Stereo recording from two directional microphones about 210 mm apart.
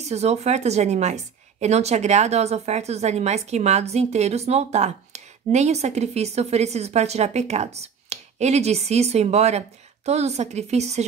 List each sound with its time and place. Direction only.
0.0 s a woman's voice: 30° right (ahead or behind)